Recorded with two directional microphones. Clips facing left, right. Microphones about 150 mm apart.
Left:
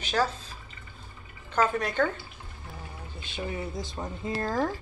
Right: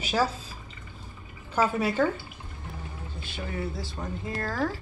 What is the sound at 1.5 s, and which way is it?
Speech, 5° right (ahead or behind).